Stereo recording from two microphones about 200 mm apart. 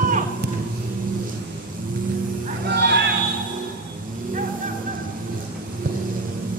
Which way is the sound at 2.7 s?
60° right (ahead or behind).